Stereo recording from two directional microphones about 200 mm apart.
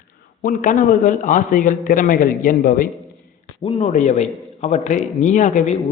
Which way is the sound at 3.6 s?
30° left (ahead or behind).